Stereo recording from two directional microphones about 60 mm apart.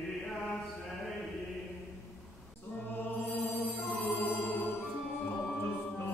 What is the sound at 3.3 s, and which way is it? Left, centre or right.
Music, left.